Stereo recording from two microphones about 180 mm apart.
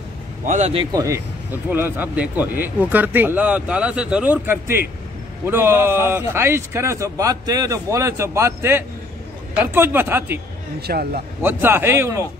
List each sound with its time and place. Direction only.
0.5 s a man's voice: 40° right (ahead or behind)
0.9 s speech: 15° right (ahead or behind)
10.8 s speech: 60° right (ahead or behind)
11.4 s speech: 10° right (ahead or behind)